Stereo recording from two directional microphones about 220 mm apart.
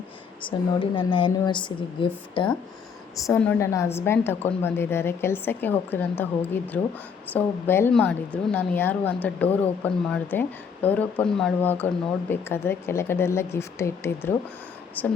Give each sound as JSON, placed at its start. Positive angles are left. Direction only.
{"t": 0.4, "sound": "speech", "side_deg": 25}
{"t": 3.2, "sound": "a woman's voice", "side_deg": 5}